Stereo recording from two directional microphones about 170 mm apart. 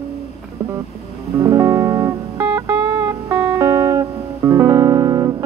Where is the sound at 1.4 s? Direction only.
20° right (ahead or behind).